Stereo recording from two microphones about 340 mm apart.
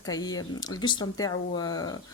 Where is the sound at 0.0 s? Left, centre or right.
Centre.